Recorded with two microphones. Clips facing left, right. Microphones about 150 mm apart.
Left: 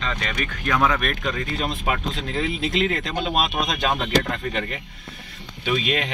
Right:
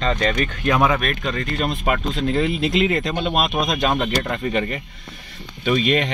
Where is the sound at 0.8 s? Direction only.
5° right (ahead or behind).